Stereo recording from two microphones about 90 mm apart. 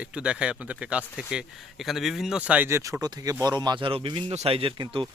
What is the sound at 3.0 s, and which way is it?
Speech, 45° right (ahead or behind).